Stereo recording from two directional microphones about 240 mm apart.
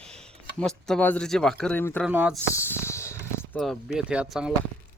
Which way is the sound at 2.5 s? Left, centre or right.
Centre.